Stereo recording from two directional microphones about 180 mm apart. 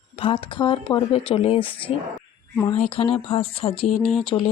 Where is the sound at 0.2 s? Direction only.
30° left (ahead or behind).